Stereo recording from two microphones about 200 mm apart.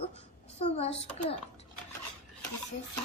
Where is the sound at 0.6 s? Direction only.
30° left (ahead or behind).